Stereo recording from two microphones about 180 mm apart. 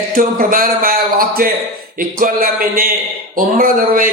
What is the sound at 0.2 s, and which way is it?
A man's voice, 50° right (ahead or behind).